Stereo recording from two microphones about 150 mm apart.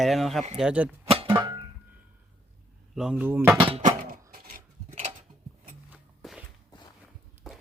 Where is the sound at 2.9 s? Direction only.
10° right (ahead or behind).